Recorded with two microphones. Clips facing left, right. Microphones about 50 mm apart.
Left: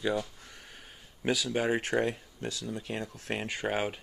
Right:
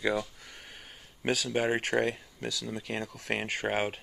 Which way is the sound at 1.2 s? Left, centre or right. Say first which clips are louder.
Even; right.